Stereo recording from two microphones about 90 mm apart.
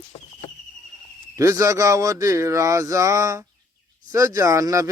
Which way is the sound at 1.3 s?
35° right (ahead or behind).